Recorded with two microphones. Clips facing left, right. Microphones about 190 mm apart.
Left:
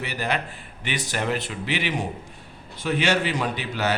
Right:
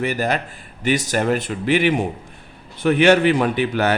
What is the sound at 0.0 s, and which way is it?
A man's voice, 45° right (ahead or behind).